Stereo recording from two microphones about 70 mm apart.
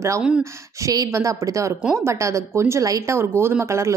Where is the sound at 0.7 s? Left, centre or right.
Right.